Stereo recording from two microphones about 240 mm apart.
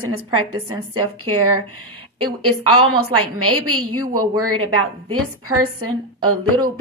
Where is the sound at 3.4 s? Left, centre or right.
Right.